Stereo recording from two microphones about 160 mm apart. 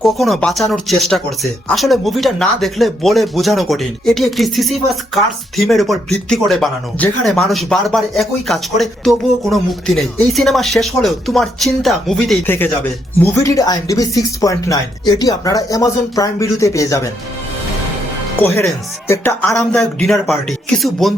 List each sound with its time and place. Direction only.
0.0 s speech: centre (ahead or behind)
12.5 s speech: 15° left (ahead or behind)
19.0 s speech: 15° left (ahead or behind)